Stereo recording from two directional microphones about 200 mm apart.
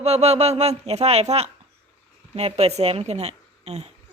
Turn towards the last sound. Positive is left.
turn(degrees=-30)  # may be behind; listen again after turning